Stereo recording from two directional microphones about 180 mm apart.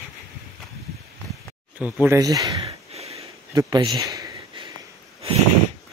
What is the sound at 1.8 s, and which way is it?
Speech, 5° right (ahead or behind).